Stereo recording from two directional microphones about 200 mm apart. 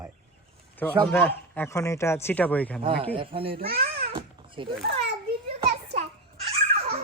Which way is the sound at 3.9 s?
25° right (ahead or behind).